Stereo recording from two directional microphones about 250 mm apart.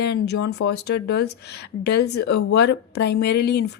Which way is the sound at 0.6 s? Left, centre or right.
Left.